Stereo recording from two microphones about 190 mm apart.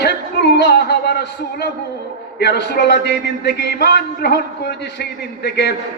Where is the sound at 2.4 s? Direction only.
60° left (ahead or behind).